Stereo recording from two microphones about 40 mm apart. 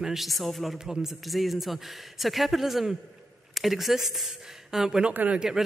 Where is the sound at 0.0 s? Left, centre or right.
Centre.